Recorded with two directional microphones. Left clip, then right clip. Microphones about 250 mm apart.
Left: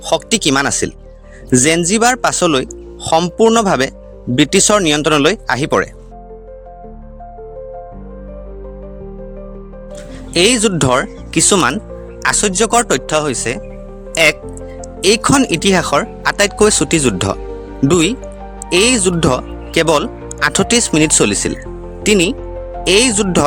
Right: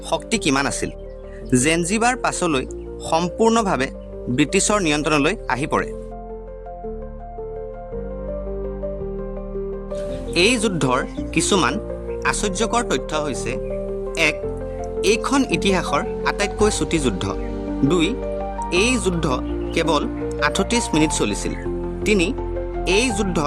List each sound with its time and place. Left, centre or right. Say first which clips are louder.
0.1 s speech: left 7 dB; left
9.9 s speech: left 5 dB; left